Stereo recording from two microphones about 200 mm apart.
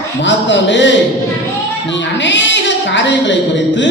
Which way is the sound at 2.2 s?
65° left (ahead or behind).